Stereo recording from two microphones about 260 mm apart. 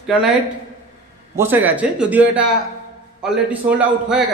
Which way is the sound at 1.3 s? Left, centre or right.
Centre.